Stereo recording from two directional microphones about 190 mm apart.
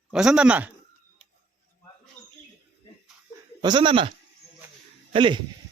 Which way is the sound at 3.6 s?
25° right (ahead or behind).